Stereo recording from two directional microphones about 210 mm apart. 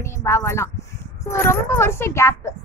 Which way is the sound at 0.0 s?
15° left (ahead or behind).